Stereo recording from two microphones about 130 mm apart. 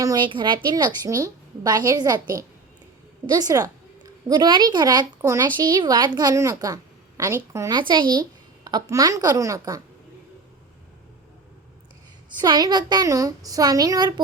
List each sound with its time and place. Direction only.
0.0 s speech: 25° right (ahead or behind)
0.3 s a woman's voice: 35° right (ahead or behind)
3.2 s a woman's voice: 30° right (ahead or behind)
7.7 s speech: 35° right (ahead or behind)
12.4 s speech: 30° right (ahead or behind)